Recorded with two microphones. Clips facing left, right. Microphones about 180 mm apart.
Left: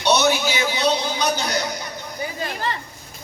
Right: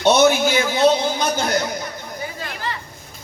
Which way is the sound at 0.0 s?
50° right (ahead or behind).